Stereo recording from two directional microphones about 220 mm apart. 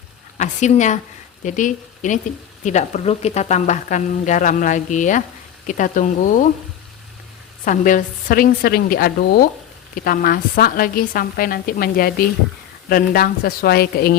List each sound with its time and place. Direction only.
0.3 s a woman's voice: 30° left (ahead or behind)
7.6 s a woman's voice: 35° left (ahead or behind)